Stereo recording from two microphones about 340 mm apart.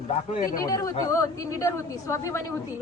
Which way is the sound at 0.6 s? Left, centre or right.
Centre.